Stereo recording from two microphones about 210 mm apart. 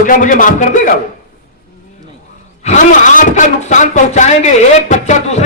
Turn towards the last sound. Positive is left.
turn(degrees=35)  # may be behind; listen again after turning